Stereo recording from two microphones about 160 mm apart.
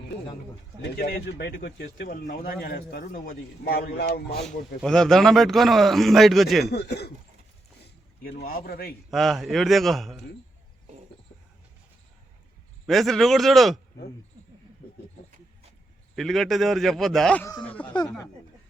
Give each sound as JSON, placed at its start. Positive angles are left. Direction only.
{"t": 0.8, "sound": "speech", "side_deg": 75}
{"t": 4.8, "sound": "a man's voice", "side_deg": 5}
{"t": 6.7, "sound": "speech", "side_deg": 90}
{"t": 8.4, "sound": "speech", "side_deg": 70}
{"t": 9.0, "sound": "a man's voice", "side_deg": 0}
{"t": 12.8, "sound": "a man's voice", "side_deg": 0}
{"t": 16.1, "sound": "a man's voice", "side_deg": 0}